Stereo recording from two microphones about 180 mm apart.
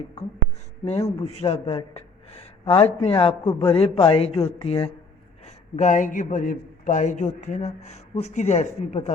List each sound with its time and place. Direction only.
1.0 s speech: 35° left (ahead or behind)
5.5 s speech: 40° left (ahead or behind)